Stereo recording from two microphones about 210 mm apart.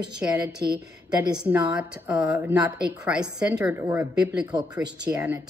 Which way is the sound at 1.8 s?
5° right (ahead or behind).